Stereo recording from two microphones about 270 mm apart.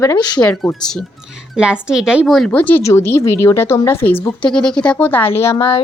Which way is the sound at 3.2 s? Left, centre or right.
Left.